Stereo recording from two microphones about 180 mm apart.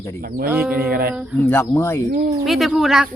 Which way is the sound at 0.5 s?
10° right (ahead or behind).